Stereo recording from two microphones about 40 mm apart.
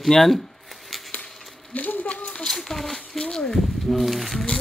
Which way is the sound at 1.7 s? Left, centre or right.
Left.